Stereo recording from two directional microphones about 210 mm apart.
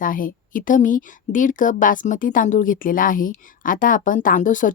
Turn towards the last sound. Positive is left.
turn(degrees=40)  # may be behind; listen again after turning